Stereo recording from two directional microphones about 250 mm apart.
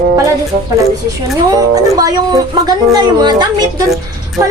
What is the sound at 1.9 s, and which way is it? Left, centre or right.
A woman's voice, centre.